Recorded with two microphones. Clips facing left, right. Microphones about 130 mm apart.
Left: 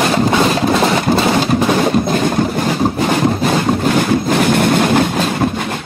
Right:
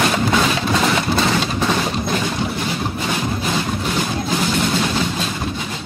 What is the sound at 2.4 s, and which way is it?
Vehicle, 45° left (ahead or behind).